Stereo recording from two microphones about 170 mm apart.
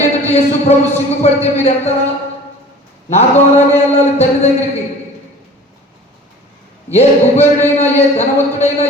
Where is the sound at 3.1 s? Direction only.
40° left (ahead or behind).